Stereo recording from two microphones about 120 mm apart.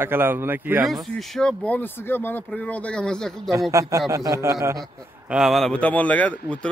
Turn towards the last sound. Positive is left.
turn(degrees=10)  # may be behind; listen again after turning